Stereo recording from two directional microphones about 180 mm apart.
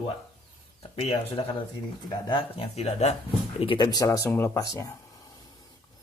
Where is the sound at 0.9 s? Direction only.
30° left (ahead or behind).